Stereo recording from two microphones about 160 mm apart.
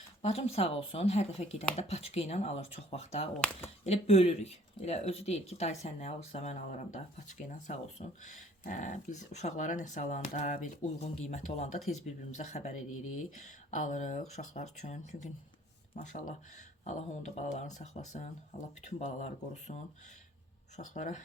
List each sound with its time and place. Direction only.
0.2 s speech: 40° left (ahead or behind)
3.3 s speech: 5° left (ahead or behind)
3.8 s speech: 40° left (ahead or behind)
16.0 s speech: 55° left (ahead or behind)